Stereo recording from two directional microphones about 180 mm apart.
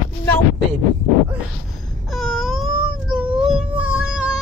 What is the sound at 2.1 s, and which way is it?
Baby cry, centre (ahead or behind).